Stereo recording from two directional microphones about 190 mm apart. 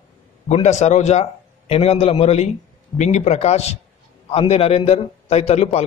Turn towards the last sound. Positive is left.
turn(degrees=35)  # may be behind; listen again after turning